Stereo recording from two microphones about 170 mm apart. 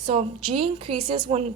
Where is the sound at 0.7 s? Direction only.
30° right (ahead or behind).